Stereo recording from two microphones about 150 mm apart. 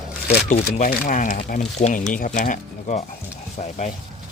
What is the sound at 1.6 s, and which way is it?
Speech, 50° left (ahead or behind).